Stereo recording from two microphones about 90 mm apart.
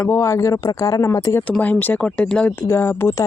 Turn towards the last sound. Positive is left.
turn(degrees=30)  # may be behind; listen again after turning